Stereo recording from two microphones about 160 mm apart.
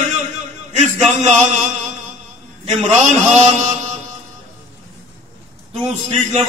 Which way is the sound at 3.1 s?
45° right (ahead or behind).